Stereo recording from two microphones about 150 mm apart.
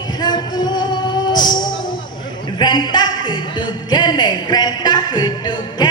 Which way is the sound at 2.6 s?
30° left (ahead or behind).